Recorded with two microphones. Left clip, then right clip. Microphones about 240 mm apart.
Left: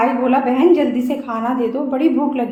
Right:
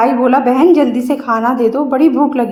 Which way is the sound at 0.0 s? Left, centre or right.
Right.